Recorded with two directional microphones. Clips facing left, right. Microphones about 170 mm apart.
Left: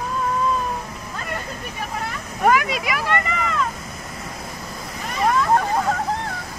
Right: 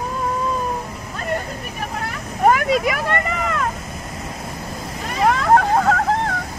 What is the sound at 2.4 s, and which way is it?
Vehicle, 45° right (ahead or behind).